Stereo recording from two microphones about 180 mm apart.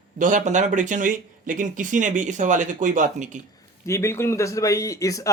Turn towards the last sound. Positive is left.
turn(degrees=20)  # may be behind; listen again after turning